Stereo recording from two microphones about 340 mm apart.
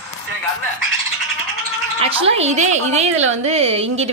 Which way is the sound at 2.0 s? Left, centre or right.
Centre.